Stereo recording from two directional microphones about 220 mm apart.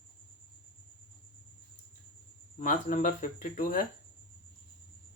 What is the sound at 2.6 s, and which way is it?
Speech, 35° left (ahead or behind).